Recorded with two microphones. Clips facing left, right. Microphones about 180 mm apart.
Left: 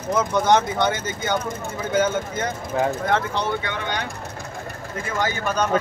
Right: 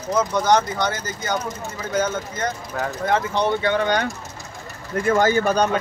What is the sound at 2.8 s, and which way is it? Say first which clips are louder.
Speech: left 6 dB; 25° left (ahead or behind).